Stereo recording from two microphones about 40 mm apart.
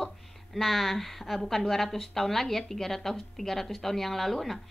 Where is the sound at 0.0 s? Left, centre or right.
Centre.